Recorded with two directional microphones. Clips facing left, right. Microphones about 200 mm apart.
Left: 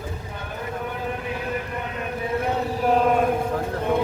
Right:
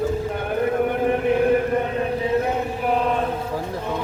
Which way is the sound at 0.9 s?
60° right (ahead or behind).